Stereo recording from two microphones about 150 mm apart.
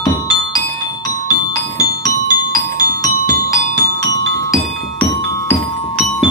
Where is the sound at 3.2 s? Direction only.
25° left (ahead or behind).